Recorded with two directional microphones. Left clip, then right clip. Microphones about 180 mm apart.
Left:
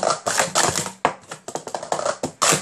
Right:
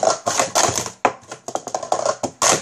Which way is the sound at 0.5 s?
Centre (ahead or behind).